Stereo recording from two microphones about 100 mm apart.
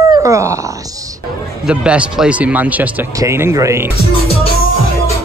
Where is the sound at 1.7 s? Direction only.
10° right (ahead or behind).